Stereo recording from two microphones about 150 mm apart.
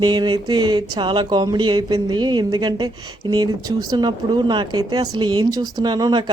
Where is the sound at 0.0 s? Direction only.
30° right (ahead or behind).